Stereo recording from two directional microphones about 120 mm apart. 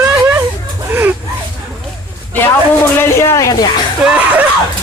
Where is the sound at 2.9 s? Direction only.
25° left (ahead or behind).